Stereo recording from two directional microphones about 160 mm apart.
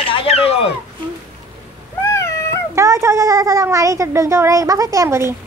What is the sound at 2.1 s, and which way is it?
Cat, 15° left (ahead or behind).